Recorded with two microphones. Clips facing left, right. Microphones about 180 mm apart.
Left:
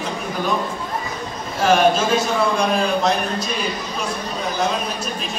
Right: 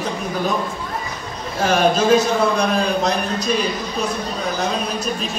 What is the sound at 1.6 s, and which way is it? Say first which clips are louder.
A man's voice: even; 40° right (ahead or behind).